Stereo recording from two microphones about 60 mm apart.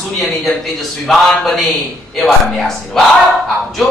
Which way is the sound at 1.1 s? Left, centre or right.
Centre.